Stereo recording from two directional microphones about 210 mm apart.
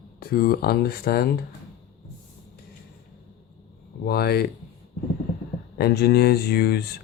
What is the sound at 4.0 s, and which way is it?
Speech, 50° left (ahead or behind).